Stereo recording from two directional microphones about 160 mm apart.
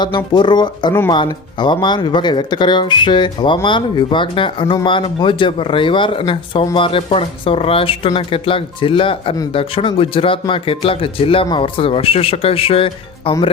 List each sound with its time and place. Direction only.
0.3 s speech: 30° left (ahead or behind)